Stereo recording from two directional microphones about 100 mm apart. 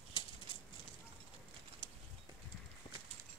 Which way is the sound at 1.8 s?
65° left (ahead or behind).